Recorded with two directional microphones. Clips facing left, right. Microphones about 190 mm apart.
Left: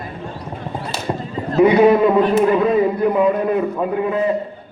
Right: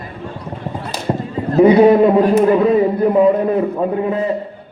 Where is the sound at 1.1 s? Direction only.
25° right (ahead or behind).